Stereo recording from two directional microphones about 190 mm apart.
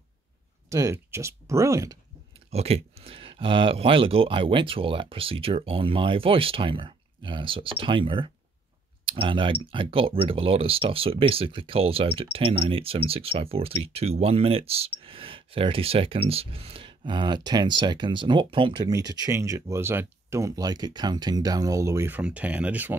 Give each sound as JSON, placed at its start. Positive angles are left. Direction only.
{"t": 0.7, "sound": "speech", "side_deg": -15}
{"t": 2.5, "sound": "speech", "side_deg": -30}